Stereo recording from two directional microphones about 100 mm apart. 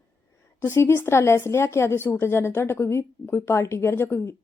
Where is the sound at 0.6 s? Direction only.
25° left (ahead or behind).